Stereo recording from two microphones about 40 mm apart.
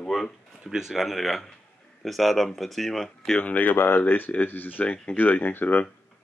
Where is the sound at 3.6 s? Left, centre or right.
Left.